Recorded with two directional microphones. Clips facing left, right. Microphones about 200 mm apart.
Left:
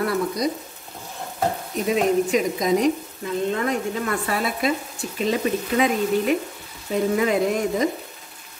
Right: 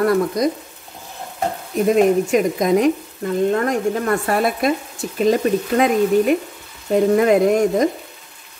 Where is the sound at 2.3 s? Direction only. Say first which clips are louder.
Right 4 dB; 50° right (ahead or behind).